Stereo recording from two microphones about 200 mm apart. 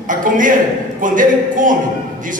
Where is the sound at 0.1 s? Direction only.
40° right (ahead or behind).